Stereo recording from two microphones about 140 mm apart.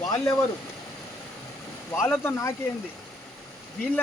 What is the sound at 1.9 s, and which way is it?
Speech, 15° left (ahead or behind).